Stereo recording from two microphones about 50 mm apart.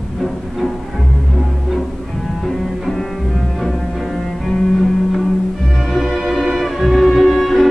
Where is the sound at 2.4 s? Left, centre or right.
Centre.